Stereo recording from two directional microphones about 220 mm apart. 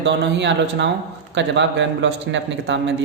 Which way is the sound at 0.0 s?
50° right (ahead or behind).